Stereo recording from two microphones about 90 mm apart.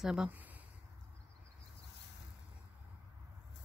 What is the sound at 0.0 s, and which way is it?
Speech, 10° right (ahead or behind).